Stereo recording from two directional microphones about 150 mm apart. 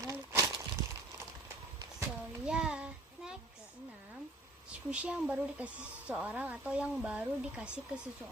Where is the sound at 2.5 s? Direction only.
5° right (ahead or behind).